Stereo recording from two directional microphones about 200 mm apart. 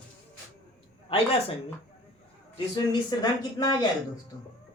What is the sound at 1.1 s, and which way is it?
Speech, 30° left (ahead or behind).